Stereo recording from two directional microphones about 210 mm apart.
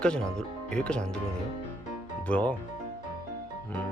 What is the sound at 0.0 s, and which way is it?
Speech, 5° left (ahead or behind).